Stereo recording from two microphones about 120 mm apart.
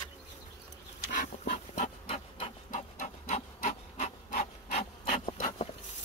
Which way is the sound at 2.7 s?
90° left.